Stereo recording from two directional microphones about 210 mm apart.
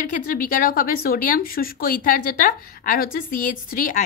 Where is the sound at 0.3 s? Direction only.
40° left (ahead or behind).